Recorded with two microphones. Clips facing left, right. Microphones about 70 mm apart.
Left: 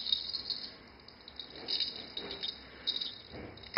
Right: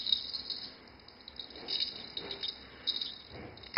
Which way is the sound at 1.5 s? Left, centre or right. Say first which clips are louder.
Even; centre.